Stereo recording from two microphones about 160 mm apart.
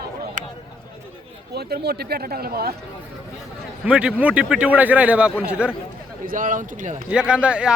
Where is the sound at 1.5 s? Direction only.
85° right.